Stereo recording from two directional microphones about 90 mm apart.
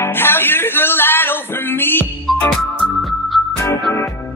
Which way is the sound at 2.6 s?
Centre (ahead or behind).